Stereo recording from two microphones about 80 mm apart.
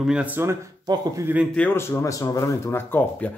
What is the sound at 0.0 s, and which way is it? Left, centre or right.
Speech, centre.